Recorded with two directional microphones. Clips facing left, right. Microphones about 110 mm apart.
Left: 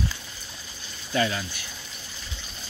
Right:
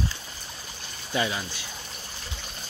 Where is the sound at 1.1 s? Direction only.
15° right (ahead or behind).